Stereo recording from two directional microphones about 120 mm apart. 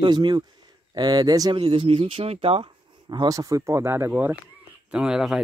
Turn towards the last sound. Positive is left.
turn(degrees=-5)  # may be behind; listen again after turning